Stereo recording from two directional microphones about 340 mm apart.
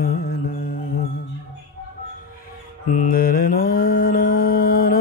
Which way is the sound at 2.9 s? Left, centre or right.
Left.